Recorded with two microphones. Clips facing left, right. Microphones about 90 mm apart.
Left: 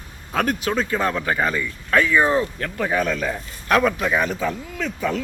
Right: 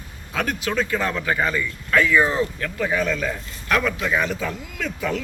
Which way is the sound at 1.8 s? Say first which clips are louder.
Left 1 dB; 30° left (ahead or behind).